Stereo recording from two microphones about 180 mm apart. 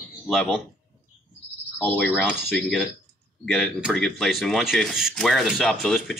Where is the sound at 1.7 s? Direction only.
5° left (ahead or behind).